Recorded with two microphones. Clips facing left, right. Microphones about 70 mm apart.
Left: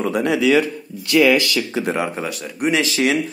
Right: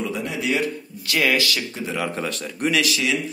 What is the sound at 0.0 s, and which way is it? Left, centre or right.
Speech, left.